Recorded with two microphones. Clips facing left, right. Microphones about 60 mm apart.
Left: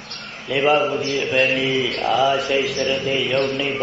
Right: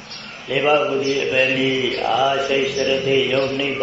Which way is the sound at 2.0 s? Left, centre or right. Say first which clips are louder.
Even; centre.